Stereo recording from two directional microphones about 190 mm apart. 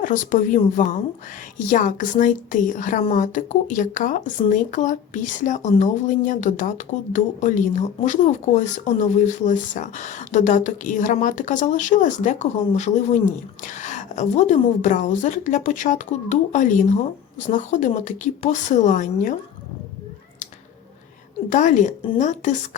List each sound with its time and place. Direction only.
0.0 s a woman's voice: 40° left (ahead or behind)
21.5 s speech: 40° left (ahead or behind)